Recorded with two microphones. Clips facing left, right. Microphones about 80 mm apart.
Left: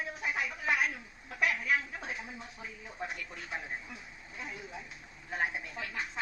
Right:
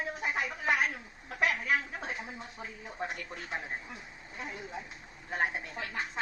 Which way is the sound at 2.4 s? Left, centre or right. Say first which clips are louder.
Right 2 dB; right.